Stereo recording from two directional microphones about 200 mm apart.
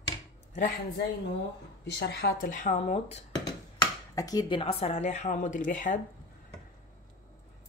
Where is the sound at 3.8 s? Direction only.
20° left (ahead or behind); by 6.0 s 40° left (ahead or behind).